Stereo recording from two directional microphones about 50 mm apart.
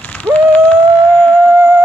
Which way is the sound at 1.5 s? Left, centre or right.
Right.